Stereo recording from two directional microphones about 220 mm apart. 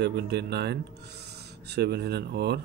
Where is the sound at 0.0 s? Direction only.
50° right (ahead or behind).